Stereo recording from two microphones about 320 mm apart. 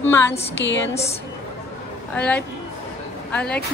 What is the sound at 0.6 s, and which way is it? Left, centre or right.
Speech, left.